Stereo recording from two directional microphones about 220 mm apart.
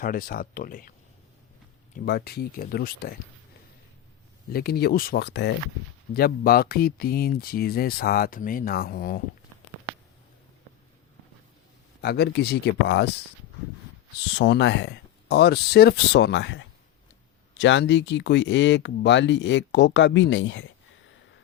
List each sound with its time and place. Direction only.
0.0 s speech: 40° left (ahead or behind)
2.0 s speech: 45° left (ahead or behind)
4.5 s speech: 45° left (ahead or behind)
12.0 s speech: 45° left (ahead or behind)
14.3 s speech: 55° left (ahead or behind)